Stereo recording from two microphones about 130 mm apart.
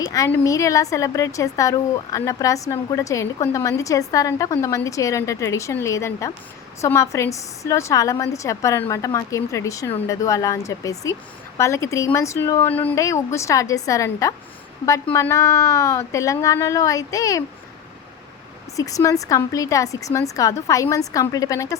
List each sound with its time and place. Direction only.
0.0 s a woman's voice: 25° left (ahead or behind)
18.8 s a woman's voice: 25° left (ahead or behind)